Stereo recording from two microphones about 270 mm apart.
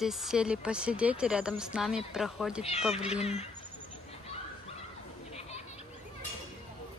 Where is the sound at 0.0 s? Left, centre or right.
Centre.